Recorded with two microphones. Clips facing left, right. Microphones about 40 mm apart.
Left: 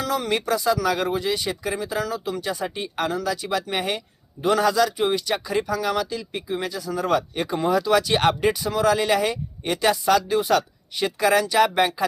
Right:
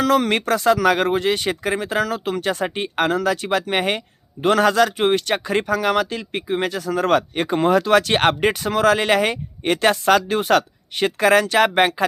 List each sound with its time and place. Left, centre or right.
0.0 s speech: right